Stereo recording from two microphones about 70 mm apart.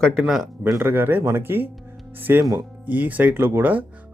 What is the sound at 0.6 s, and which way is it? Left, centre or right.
Speech, right.